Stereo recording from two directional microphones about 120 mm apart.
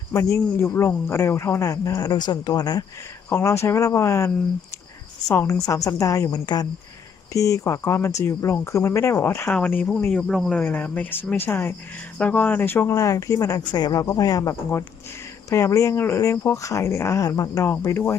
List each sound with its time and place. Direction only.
0.1 s speech: 25° left (ahead or behind)
3.2 s speech: 20° left (ahead or behind)
5.3 s a woman's voice: 20° left (ahead or behind); by 10.6 s 5° left (ahead or behind)
10.6 s speech: 15° left (ahead or behind)